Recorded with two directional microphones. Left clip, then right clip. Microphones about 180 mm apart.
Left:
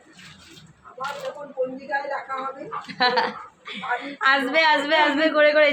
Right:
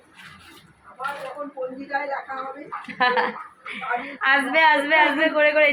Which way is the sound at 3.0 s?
10° left (ahead or behind).